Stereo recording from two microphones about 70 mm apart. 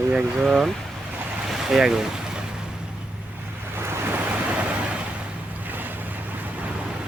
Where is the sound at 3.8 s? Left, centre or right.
Right.